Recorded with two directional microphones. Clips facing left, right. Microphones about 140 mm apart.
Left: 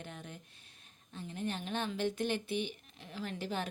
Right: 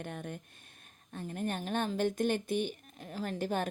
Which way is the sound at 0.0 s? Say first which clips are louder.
Right 6 dB; 55° right (ahead or behind).